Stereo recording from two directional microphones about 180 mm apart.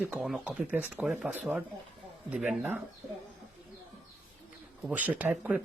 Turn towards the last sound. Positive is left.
turn(degrees=-10)  # may be behind; listen again after turning